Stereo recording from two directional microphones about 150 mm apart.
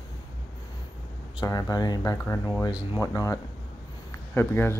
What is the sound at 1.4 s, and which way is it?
Speech, 25° left (ahead or behind).